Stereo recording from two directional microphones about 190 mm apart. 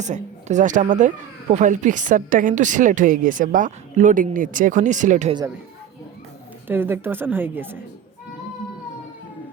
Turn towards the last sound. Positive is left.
turn(degrees=-10)  # may be behind; listen again after turning